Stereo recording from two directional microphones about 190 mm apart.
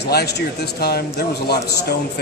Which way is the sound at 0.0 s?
60° left (ahead or behind).